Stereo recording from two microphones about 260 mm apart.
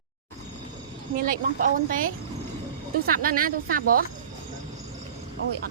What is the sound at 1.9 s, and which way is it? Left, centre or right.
Speech, right.